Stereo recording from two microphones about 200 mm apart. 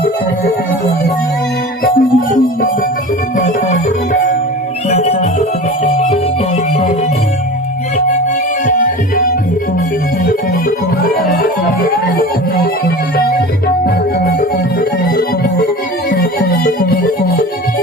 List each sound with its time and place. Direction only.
1.8 s music: 45° left (ahead or behind)
8.6 s music: 45° left (ahead or behind)
13.1 s music: 50° left (ahead or behind)
14.8 s music: 45° left (ahead or behind)